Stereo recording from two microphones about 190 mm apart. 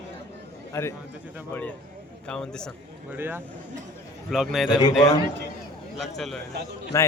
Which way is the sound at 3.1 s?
10° right (ahead or behind).